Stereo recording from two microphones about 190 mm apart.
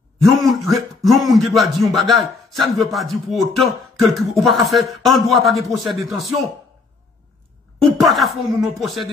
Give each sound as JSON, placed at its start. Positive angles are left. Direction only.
{"t": 0.2, "sound": "speech", "side_deg": 0}
{"t": 7.8, "sound": "speech", "side_deg": 0}